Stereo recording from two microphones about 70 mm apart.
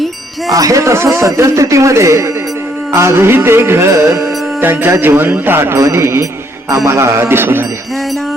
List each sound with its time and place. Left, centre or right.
0.5 s speech: right
2.9 s music: right
4.6 s music: right